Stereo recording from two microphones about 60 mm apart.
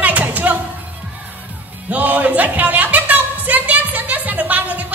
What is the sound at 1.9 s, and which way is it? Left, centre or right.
Music, right.